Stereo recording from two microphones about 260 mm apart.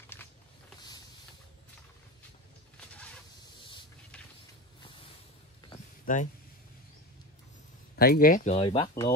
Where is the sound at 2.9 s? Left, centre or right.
Centre.